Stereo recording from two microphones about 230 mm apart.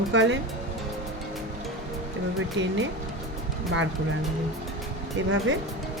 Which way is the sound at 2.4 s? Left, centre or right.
Right.